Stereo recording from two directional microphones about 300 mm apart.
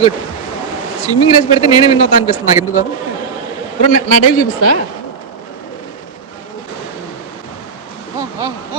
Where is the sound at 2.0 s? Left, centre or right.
Left.